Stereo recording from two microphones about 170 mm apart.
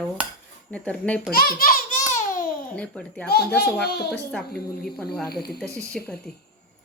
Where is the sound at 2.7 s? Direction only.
10° left (ahead or behind).